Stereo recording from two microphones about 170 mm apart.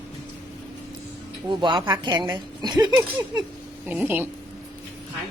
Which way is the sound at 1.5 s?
30° right (ahead or behind).